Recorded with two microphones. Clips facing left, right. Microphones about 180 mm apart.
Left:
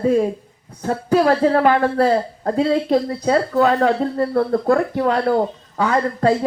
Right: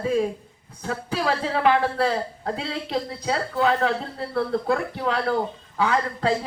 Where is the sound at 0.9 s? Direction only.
45° left (ahead or behind).